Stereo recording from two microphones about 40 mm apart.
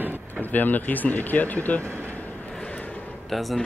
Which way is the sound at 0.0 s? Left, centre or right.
Right.